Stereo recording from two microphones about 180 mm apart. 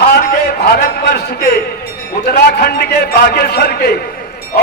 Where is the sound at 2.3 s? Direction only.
60° left (ahead or behind).